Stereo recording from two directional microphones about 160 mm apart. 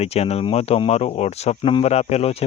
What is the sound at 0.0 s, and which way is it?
Speech, 40° left (ahead or behind).